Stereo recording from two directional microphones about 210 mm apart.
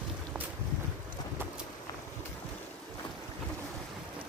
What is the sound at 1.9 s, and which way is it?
Walk, 15° left (ahead or behind).